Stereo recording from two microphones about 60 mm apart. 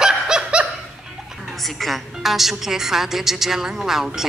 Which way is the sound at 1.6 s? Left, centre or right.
Centre.